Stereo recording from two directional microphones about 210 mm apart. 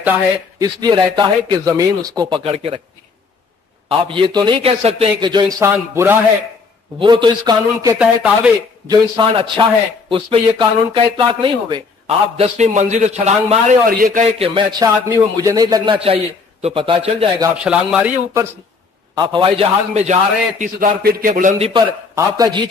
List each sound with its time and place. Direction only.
0.0 s a man's voice: 10° right (ahead or behind)
0.7 s a man's voice: 20° right (ahead or behind)
3.9 s a man's voice: 25° right (ahead or behind)
7.0 s a man's voice: 20° right (ahead or behind)
8.8 s a man's voice: 20° right (ahead or behind)
17.6 s speech: 5° right (ahead or behind)
19.1 s a man's voice: 20° right (ahead or behind)